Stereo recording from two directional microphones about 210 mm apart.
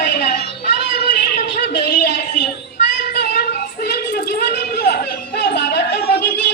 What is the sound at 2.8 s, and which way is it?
Child singing, 50° left (ahead or behind).